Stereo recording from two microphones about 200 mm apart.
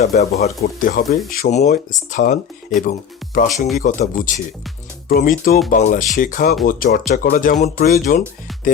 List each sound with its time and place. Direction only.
0.0 s speech: 35° left (ahead or behind)
0.6 s speech: 45° left (ahead or behind)